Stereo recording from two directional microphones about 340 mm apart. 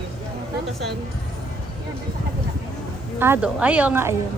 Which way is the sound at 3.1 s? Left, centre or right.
Centre.